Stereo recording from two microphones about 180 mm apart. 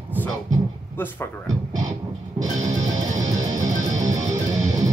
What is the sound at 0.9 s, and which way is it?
Speech, 10° left (ahead or behind).